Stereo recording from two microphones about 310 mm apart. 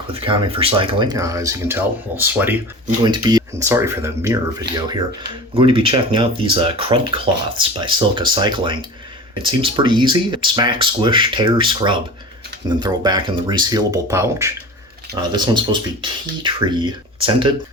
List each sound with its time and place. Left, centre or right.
0.1 s speech: centre
4.7 s speech: right
5.5 s speech: centre